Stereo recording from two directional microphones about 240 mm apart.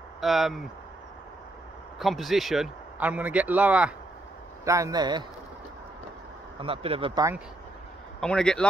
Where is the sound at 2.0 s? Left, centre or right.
Centre.